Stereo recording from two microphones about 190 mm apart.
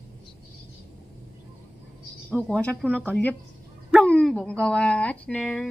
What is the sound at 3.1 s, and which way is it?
A woman's voice, 10° left (ahead or behind).